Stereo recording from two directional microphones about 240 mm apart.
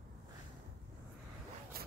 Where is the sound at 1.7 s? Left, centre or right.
Right.